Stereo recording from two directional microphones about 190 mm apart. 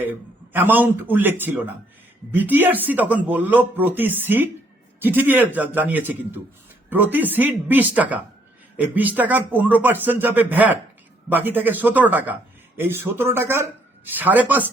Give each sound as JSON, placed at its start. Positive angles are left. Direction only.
{"t": 0.0, "sound": "a man's voice", "side_deg": -10}